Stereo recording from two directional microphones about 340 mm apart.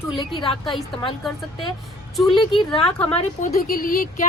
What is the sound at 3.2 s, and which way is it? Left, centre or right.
Speech, left.